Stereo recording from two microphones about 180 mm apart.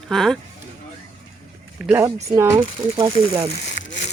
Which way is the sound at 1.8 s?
10° right (ahead or behind).